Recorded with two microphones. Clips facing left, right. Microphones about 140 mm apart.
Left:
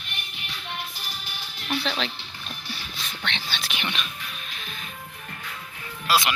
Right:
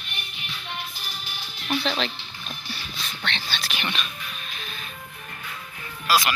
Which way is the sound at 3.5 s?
20° left (ahead or behind).